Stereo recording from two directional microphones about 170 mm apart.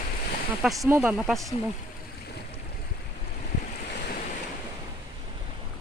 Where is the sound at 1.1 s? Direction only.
Centre (ahead or behind).